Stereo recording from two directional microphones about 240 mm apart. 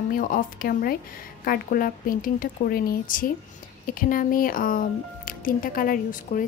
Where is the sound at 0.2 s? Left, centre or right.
Left.